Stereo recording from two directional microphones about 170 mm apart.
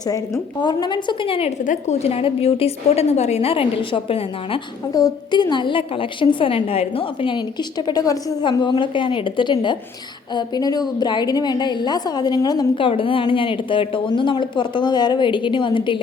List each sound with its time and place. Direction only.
0.6 s a woman's voice: 25° left (ahead or behind)